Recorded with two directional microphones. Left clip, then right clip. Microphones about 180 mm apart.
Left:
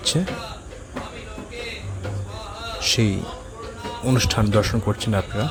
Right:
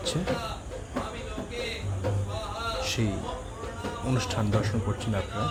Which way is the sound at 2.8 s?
40° left (ahead or behind).